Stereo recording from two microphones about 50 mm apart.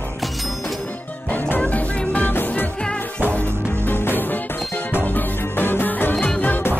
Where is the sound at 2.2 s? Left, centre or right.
Left.